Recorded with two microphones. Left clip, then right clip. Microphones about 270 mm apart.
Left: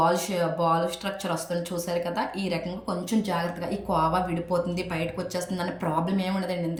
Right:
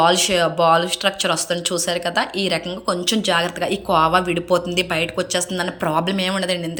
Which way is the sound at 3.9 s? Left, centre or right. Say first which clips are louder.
Right 8 dB; centre.